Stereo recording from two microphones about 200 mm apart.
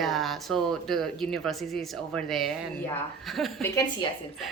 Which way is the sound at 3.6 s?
15° left (ahead or behind).